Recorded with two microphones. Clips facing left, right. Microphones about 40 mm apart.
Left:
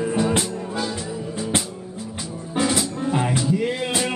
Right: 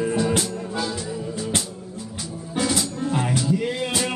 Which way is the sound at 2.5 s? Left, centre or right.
Centre.